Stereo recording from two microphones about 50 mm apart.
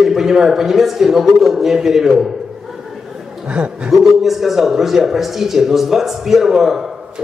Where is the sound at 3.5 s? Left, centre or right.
Right.